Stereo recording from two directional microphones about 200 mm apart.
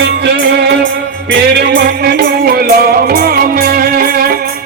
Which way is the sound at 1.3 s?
55° right (ahead or behind).